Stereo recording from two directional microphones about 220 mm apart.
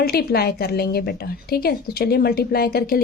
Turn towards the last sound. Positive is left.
turn(degrees=45)  # may be behind; listen again after turning